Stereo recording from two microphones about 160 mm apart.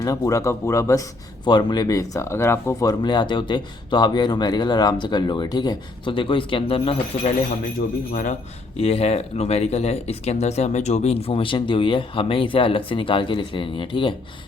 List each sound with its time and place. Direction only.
0.0 s speech: 20° left (ahead or behind)
3.0 s speech: 25° left (ahead or behind)
8.1 s speech: 50° left (ahead or behind); by 14.2 s 30° left (ahead or behind)